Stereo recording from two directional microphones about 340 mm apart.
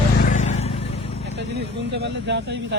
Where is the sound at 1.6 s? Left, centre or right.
Right.